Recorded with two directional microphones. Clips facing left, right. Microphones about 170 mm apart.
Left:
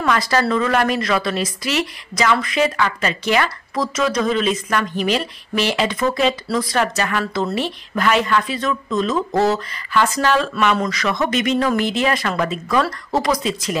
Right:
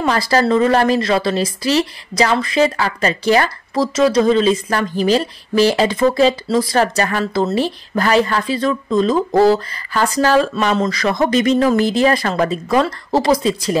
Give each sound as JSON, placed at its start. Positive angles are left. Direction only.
{"t": 0.0, "sound": "speech", "side_deg": -30}